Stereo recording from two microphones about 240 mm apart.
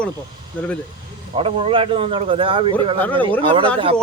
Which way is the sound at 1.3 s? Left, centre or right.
Right.